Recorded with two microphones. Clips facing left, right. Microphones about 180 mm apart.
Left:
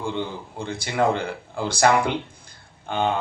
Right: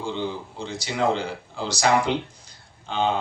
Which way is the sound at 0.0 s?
55° left (ahead or behind).